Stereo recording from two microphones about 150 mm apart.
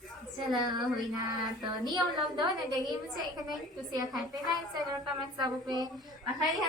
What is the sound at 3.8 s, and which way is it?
Speech, 25° right (ahead or behind).